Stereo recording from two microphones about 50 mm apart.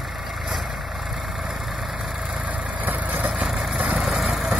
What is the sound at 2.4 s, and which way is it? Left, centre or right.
Vehicle, right.